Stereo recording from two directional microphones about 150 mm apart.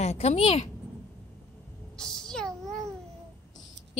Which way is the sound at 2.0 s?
5° left (ahead or behind).